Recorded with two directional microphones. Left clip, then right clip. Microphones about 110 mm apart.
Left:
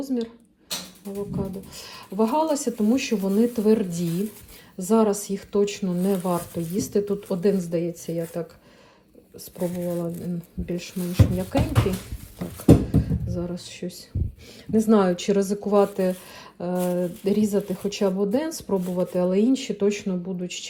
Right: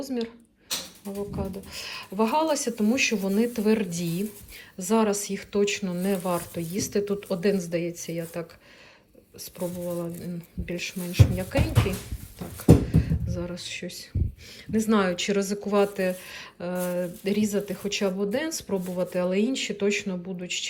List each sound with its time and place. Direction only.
0.0 s speech: 30° left (ahead or behind)
9.6 s speech: centre (ahead or behind)
10.7 s speech: 40° left (ahead or behind)
13.3 s speech: 40° left (ahead or behind)
17.2 s speech: 45° left (ahead or behind)